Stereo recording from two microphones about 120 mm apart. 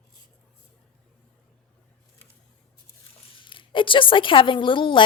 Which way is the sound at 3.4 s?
45° left (ahead or behind).